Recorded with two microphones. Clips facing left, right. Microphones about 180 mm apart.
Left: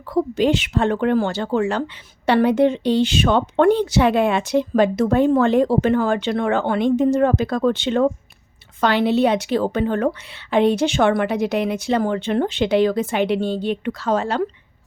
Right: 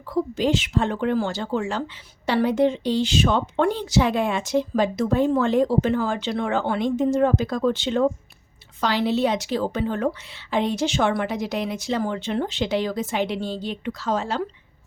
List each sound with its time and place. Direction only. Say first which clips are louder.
0.1 s speech: left 4 dB; 65° left (ahead or behind)